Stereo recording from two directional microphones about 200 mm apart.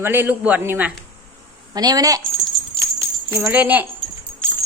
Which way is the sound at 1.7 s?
20° right (ahead or behind).